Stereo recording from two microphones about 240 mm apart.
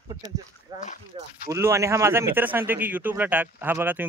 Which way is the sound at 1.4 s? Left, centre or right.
Centre.